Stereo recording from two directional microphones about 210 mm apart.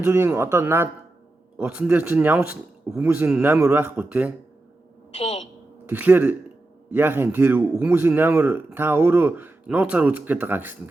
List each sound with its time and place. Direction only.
0.0 s a man's voice: 10° right (ahead or behind)
5.1 s a woman's voice: 30° left (ahead or behind)
5.8 s a man's voice: 10° right (ahead or behind)